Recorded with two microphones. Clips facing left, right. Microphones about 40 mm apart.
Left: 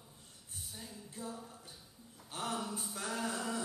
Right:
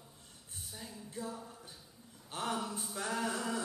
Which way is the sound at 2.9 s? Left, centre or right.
Centre.